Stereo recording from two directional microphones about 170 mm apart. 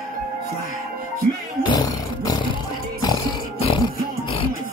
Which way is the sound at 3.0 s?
25° left (ahead or behind).